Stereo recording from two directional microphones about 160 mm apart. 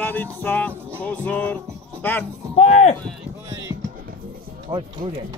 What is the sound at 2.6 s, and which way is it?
Speech, 40° left (ahead or behind).